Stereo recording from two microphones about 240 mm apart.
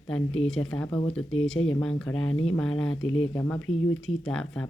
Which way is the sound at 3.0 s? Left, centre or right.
Left.